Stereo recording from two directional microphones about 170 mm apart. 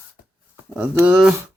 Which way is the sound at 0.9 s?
5° right (ahead or behind).